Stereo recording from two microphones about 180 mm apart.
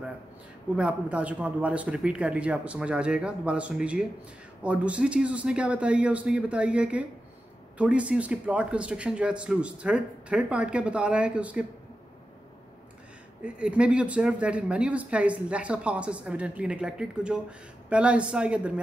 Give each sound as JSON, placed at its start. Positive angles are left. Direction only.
{"t": 0.7, "sound": "speech", "side_deg": -5}
{"t": 13.4, "sound": "speech", "side_deg": -5}